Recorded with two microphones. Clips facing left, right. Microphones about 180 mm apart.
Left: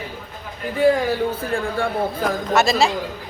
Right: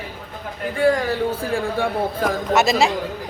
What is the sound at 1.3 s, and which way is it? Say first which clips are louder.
Speech: right 1 dB; 10° right (ahead or behind).